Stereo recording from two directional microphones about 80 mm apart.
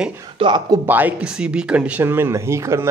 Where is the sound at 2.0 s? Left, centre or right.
Right.